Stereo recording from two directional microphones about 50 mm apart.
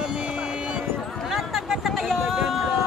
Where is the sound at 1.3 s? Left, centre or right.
Centre.